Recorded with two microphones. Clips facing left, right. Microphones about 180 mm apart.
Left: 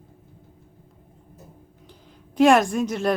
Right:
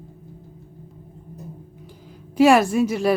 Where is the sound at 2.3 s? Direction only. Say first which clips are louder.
Right 2 dB; 5° right (ahead or behind).